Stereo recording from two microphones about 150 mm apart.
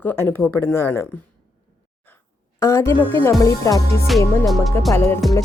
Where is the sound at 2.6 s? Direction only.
20° left (ahead or behind).